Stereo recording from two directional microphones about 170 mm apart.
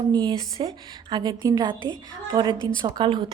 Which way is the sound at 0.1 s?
25° right (ahead or behind).